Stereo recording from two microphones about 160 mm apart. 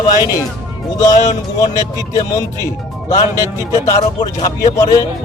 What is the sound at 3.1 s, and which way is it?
Speech, 20° left (ahead or behind).